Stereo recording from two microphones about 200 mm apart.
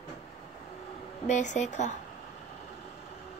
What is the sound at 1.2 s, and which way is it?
Speech, 35° left (ahead or behind).